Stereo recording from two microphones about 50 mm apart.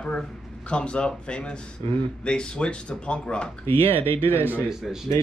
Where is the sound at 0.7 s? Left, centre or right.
Left.